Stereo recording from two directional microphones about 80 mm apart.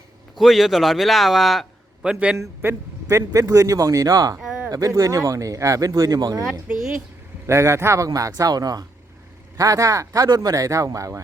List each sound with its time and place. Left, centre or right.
0.3 s a man's voice: centre
2.0 s a man's voice: centre
2.6 s a man's voice: right
4.4 s a sound: centre
4.7 s a man's voice: right
6.7 s a man's voice: centre
7.4 s a man's voice: right